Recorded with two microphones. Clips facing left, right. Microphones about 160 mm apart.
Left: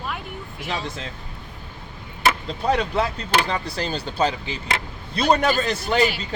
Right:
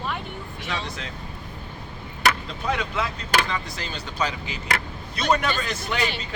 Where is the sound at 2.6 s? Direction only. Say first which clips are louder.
Left 6 dB; 35° left (ahead or behind).